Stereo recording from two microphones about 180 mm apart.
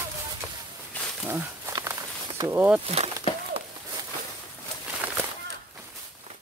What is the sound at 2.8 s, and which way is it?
Speech, 35° right (ahead or behind).